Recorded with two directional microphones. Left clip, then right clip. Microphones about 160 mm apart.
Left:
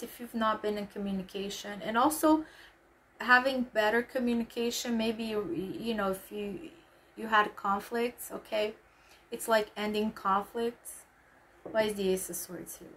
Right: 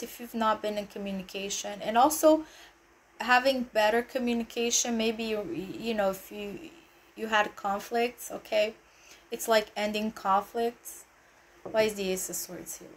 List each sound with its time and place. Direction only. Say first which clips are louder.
0.3 s speech: right 2 dB; 5° left (ahead or behind)
11.7 s speech: right 2 dB; 10° left (ahead or behind)